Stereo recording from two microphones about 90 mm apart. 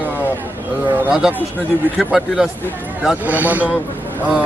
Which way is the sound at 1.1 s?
5° right (ahead or behind).